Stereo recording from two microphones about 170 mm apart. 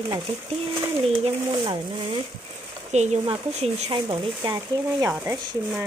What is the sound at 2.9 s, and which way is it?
Speech, 40° right (ahead or behind).